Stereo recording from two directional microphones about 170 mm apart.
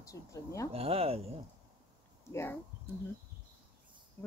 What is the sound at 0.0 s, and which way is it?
Speech, 20° left (ahead or behind).